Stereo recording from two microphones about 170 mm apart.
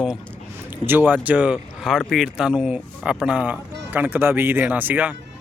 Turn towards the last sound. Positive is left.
turn(degrees=-10)  # may be behind; listen again after turning